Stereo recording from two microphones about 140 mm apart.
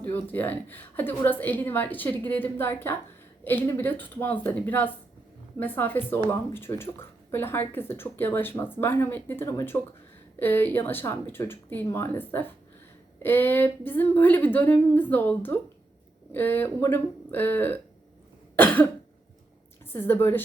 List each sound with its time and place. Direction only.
0.0 s speech: 15° left (ahead or behind)
18.5 s cough: 10° left (ahead or behind)
19.9 s speech: 15° left (ahead or behind)